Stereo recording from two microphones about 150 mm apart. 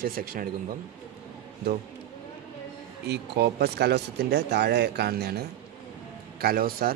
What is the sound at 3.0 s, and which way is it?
Speech, 90° right.